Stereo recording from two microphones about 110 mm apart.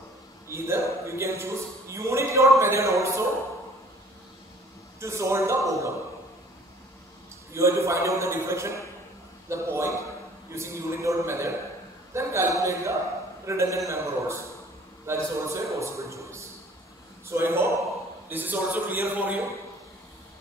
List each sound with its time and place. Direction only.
0.5 s a man's voice: 25° right (ahead or behind)
5.0 s a man's voice: 25° right (ahead or behind)
7.5 s a man's voice: 25° right (ahead or behind)